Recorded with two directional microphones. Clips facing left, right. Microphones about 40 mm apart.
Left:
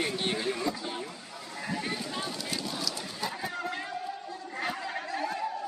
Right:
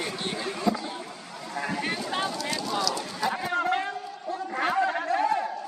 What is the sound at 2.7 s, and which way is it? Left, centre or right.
Sheep, right.